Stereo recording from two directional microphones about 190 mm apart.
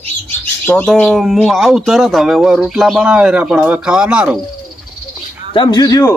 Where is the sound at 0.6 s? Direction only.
5° left (ahead or behind).